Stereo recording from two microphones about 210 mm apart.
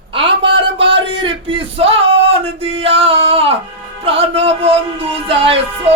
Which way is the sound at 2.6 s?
25° right (ahead or behind).